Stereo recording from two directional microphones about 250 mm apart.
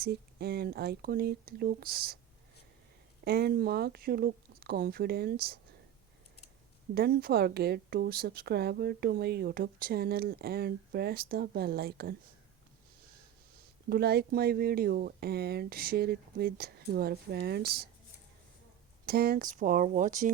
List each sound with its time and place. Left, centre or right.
0.0 s a woman's voice: right
3.2 s a woman's voice: right
6.9 s a woman's voice: right
13.9 s a woman's voice: right
19.0 s a woman's voice: right